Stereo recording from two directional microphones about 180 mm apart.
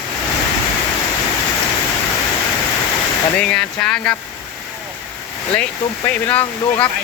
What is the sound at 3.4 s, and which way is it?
Speech, 5° left (ahead or behind).